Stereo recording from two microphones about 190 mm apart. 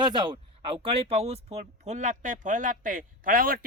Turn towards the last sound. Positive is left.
turn(degrees=-50)  # may be behind; listen again after turning